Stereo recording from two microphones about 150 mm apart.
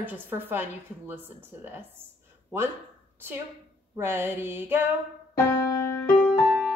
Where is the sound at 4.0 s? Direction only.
15° right (ahead or behind).